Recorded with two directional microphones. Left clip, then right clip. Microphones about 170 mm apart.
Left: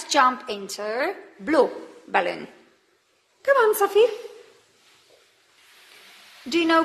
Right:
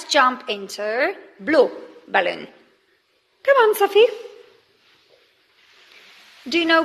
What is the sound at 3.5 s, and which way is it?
Speech, 20° right (ahead or behind).